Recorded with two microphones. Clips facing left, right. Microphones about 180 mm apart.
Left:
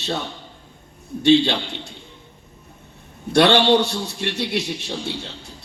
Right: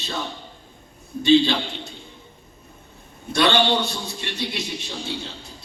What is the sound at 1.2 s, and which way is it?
Speech, 70° left (ahead or behind).